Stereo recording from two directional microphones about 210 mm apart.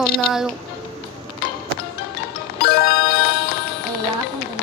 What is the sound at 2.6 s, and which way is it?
Music, 50° left (ahead or behind).